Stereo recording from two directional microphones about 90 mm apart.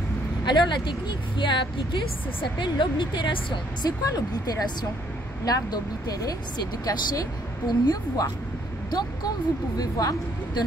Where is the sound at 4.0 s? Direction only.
45° left (ahead or behind).